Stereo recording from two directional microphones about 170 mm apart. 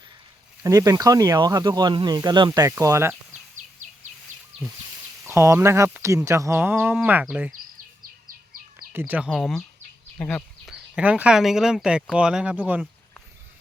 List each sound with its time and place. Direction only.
0.6 s speech: 20° right (ahead or behind)
3.8 s bird vocalization: 45° right (ahead or behind)
5.2 s speech: 15° right (ahead or behind)
8.9 s speech: 10° right (ahead or behind)
10.2 s a sound: 5° left (ahead or behind)
10.9 s speech: 5° right (ahead or behind)